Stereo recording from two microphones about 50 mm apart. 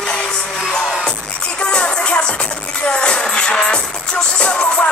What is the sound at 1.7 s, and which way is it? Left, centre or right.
Music, left.